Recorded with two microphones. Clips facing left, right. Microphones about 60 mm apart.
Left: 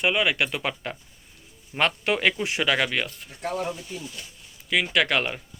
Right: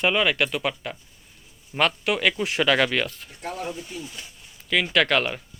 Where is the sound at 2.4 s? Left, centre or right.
Centre.